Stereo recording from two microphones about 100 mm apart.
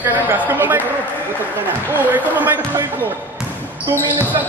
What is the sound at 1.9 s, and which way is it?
Speech, 15° right (ahead or behind).